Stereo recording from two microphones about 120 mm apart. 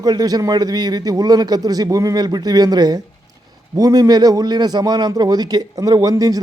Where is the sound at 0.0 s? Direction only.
35° right (ahead or behind).